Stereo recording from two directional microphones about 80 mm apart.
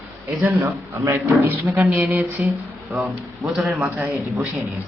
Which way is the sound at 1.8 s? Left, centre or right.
Right.